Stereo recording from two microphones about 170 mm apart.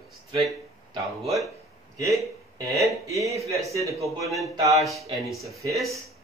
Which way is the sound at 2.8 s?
20° right (ahead or behind).